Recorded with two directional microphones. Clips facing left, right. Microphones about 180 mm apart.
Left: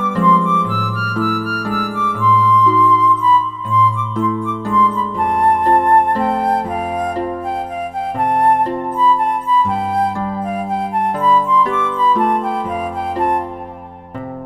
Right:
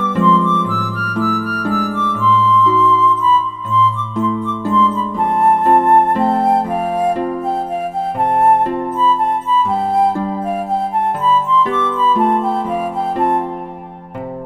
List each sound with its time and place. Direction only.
0.3 s music: 10° left (ahead or behind)
5.4 s music: 25° right (ahead or behind)
9.0 s music: 15° left (ahead or behind)
11.2 s music: 10° left (ahead or behind)